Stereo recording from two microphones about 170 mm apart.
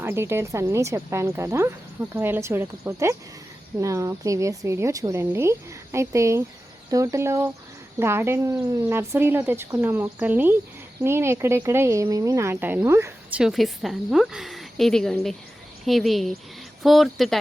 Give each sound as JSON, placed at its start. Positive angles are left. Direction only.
{"t": 0.0, "sound": "speech", "side_deg": -15}
{"t": 13.4, "sound": "a woman's voice", "side_deg": 0}